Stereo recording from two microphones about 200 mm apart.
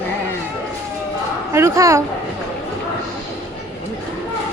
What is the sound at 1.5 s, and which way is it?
Speech, 15° right (ahead or behind).